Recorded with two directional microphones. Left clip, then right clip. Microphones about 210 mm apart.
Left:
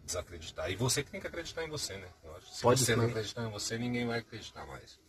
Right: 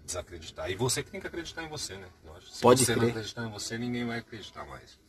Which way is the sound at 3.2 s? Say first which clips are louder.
Even; centre (ahead or behind).